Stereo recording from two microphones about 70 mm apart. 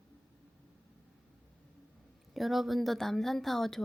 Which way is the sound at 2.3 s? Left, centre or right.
Centre.